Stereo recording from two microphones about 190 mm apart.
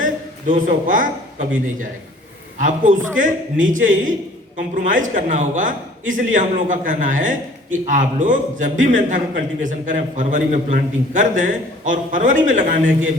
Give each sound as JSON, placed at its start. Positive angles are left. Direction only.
{"t": 0.0, "sound": "a man's voice", "side_deg": -40}
{"t": 2.6, "sound": "a man's voice", "side_deg": -45}